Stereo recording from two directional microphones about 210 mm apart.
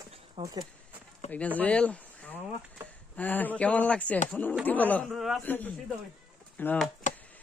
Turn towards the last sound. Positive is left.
turn(degrees=10)  # may be behind; listen again after turning